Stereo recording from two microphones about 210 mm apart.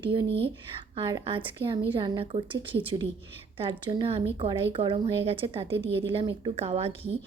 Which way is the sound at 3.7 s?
20° right (ahead or behind).